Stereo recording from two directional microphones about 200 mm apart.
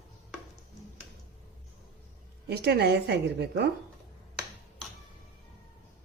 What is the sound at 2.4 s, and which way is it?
Speech, 55° right (ahead or behind).